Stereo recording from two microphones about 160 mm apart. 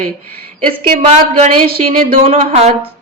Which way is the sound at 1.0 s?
40° right (ahead or behind).